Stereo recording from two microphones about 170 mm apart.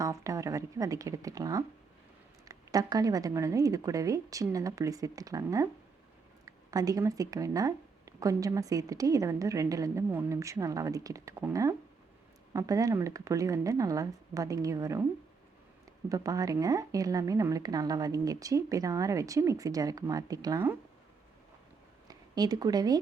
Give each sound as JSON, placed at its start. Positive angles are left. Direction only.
{"t": 0.0, "sound": "speech", "side_deg": -20}
{"t": 16.0, "sound": "speech", "side_deg": -20}
{"t": 22.0, "sound": "speech", "side_deg": -25}